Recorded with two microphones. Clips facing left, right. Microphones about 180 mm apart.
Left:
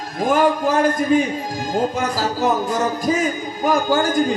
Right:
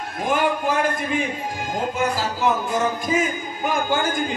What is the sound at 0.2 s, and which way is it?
Music, 40° left (ahead or behind).